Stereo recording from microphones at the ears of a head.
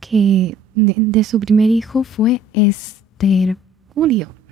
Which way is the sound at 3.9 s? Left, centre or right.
Right.